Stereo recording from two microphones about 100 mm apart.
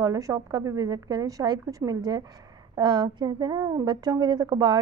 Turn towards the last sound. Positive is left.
turn(degrees=-45)  # may be behind; listen again after turning